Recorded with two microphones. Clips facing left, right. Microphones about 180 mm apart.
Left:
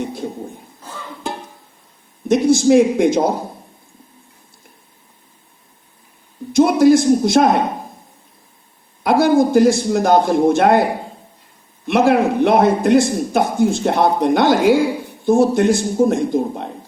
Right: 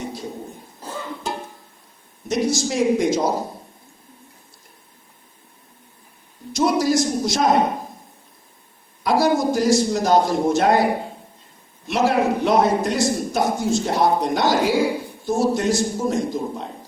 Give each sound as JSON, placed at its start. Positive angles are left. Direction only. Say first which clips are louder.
{"t": 2.2, "sound": "a man's voice", "louder": "left 9 dB", "side_deg": 55}
{"t": 6.5, "sound": "a sound", "louder": "left 8 dB", "side_deg": 55}
{"t": 9.0, "sound": "a man's voice", "louder": "left 5 dB", "side_deg": 55}
{"t": 11.9, "sound": "a man's voice", "louder": "left 5 dB", "side_deg": 60}